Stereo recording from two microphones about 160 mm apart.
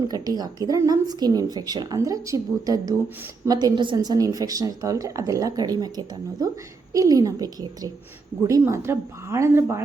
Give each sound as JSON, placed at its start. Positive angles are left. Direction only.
{"t": 0.1, "sound": "a woman's voice", "side_deg": -25}